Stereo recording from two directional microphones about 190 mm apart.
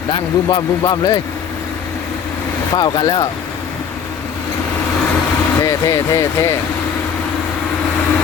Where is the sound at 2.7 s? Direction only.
20° left (ahead or behind).